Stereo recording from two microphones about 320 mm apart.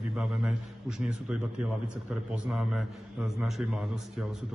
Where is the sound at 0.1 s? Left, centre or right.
Centre.